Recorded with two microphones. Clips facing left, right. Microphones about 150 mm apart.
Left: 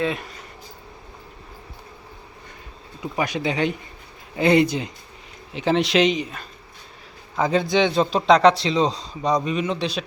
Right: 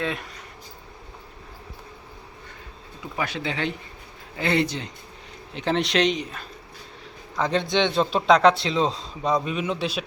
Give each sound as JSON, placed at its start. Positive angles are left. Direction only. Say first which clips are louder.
{"t": 0.0, "sound": "speech", "louder": "left 4 dB", "side_deg": 0}
{"t": 3.2, "sound": "a man's voice", "louder": "left 5 dB", "side_deg": 15}